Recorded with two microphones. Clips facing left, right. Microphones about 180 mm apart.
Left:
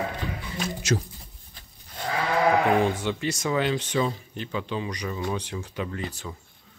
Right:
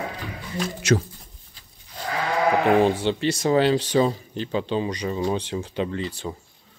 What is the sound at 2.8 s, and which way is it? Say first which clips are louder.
Speech: right 5 dB; 30° right (ahead or behind).